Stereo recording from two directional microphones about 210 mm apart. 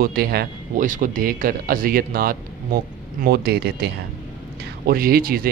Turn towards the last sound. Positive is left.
turn(degrees=-45)  # may be behind; listen again after turning